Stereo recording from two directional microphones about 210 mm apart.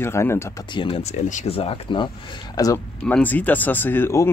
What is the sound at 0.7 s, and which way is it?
Speech, 25° left (ahead or behind).